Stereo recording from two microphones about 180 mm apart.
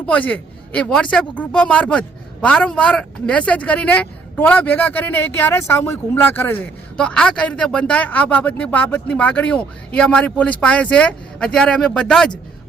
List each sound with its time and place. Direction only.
0.0 s speech: 10° left (ahead or behind)